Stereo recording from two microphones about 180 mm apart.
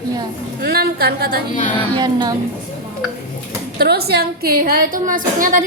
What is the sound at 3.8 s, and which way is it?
A woman's voice, 60° right (ahead or behind).